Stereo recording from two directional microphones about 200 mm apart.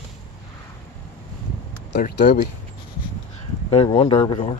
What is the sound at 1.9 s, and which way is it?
Speech, 55° left (ahead or behind).